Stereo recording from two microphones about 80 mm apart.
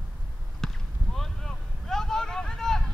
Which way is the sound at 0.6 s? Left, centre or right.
Centre.